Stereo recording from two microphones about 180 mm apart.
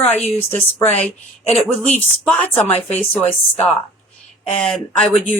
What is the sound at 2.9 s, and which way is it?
Speech, 10° left (ahead or behind).